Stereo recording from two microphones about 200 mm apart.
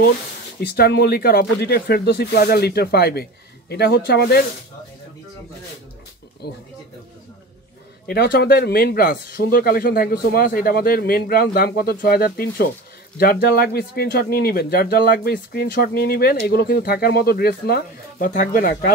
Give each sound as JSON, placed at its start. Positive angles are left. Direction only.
{"t": 0.6, "sound": "speech", "side_deg": 50}
{"t": 6.4, "sound": "speech", "side_deg": 55}
{"t": 8.1, "sound": "speech", "side_deg": 50}